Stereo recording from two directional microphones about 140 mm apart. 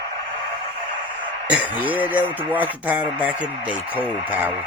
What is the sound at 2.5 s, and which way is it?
Speech, 10° right (ahead or behind).